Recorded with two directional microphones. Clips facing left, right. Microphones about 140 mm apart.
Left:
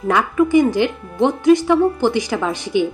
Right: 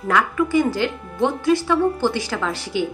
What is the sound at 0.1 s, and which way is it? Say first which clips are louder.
A woman's voice: left 4 dB; 20° left (ahead or behind).